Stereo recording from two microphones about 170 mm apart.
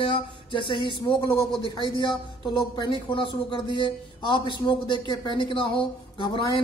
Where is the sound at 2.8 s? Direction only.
30° left (ahead or behind).